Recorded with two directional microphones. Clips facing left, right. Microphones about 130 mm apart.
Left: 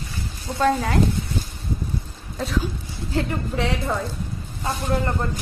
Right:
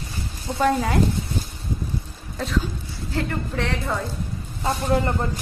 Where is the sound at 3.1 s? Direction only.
10° left (ahead or behind).